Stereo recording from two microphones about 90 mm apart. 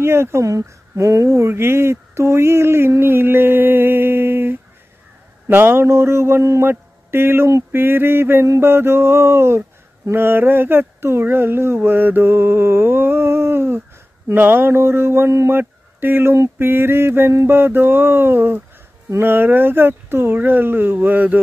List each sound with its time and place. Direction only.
0.0 s speech: 30° right (ahead or behind)